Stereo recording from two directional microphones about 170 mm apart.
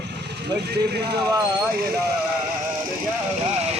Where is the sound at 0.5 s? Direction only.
80° right.